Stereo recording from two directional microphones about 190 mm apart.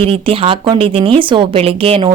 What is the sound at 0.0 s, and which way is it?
Speech, 30° right (ahead or behind).